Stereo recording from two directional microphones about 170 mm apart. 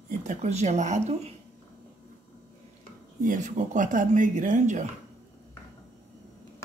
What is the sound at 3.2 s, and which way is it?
Speech, 50° right (ahead or behind).